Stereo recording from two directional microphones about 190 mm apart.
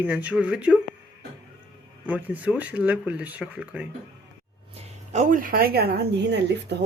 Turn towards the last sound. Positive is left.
turn(degrees=-60)  # may be behind; listen again after turning